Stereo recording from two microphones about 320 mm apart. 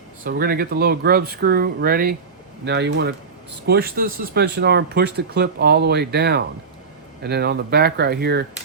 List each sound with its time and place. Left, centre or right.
0.3 s speech: right